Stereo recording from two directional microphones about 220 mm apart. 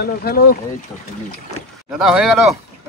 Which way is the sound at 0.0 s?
45° left (ahead or behind).